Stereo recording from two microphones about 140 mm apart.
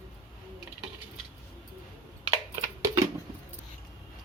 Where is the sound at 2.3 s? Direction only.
20° right (ahead or behind).